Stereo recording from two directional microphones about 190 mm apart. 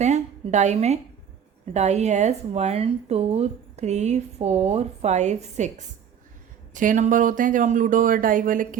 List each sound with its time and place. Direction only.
0.0 s a woman's voice: 40° right (ahead or behind)